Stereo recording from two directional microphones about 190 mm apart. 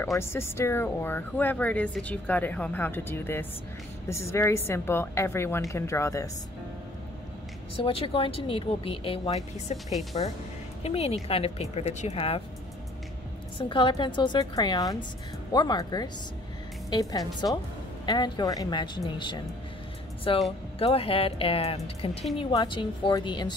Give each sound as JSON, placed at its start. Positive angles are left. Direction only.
{"t": 0.2, "sound": "speech", "side_deg": 15}
{"t": 7.7, "sound": "speech", "side_deg": 30}
{"t": 13.6, "sound": "speech", "side_deg": 25}